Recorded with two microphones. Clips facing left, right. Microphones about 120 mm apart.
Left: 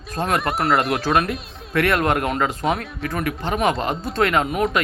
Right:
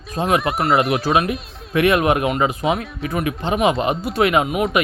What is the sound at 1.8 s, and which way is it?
Speech, 15° right (ahead or behind).